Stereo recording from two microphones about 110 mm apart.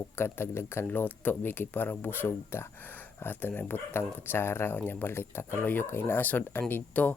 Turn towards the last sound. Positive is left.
turn(degrees=15)  # may be behind; listen again after turning